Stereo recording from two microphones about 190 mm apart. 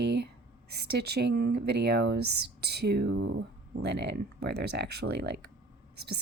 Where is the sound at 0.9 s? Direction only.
60° right (ahead or behind).